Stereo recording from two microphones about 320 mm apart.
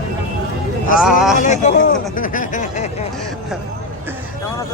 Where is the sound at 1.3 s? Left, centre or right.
Left.